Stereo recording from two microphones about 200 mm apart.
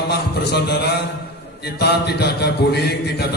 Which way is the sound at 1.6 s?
55° left (ahead or behind).